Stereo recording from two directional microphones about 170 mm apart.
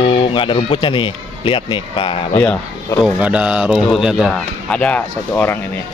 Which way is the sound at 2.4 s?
10° left (ahead or behind).